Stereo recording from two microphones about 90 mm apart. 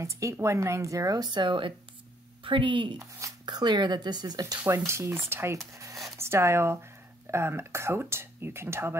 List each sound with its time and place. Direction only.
0.0 s speech: 35° right (ahead or behind); by 3.0 s 65° right (ahead or behind)
3.0 s speech: 35° right (ahead or behind)
3.4 s speech: 55° right (ahead or behind)
4.6 s speech: 30° right (ahead or behind)
5.7 s a sound: 35° right (ahead or behind)
6.1 s speech: 30° right (ahead or behind)